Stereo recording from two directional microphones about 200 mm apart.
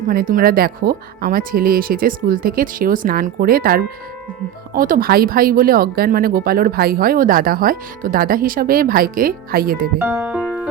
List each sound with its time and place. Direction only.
0.1 s speech: 45° right (ahead or behind)
10.0 s speech: 5° right (ahead or behind)